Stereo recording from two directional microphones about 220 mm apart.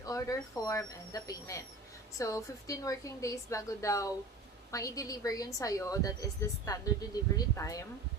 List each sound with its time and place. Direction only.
0.0 s a woman's voice: 15° left (ahead or behind)